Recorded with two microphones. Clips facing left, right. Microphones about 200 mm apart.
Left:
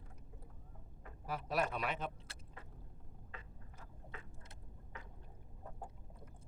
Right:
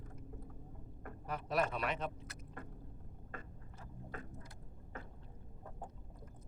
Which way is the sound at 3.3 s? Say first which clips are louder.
Right 5 dB; 50° right (ahead or behind).